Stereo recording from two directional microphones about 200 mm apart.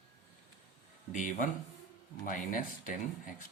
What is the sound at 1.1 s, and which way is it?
Speech, 40° left (ahead or behind).